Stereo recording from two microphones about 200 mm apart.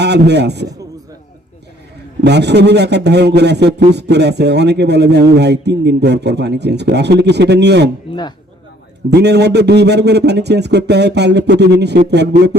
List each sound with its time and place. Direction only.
0.0 s speech: 55° right (ahead or behind)
2.2 s speech: 55° right (ahead or behind)
8.1 s speech: 30° left (ahead or behind)
9.0 s speech: 55° right (ahead or behind)